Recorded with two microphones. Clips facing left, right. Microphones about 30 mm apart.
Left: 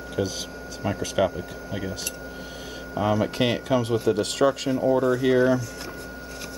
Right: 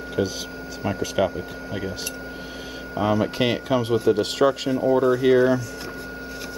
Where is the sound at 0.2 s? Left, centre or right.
Centre.